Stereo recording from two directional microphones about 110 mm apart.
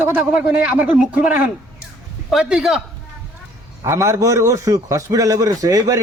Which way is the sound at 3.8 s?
25° right (ahead or behind).